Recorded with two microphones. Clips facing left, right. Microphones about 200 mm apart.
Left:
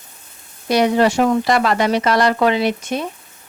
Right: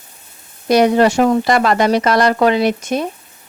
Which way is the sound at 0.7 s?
45° right (ahead or behind).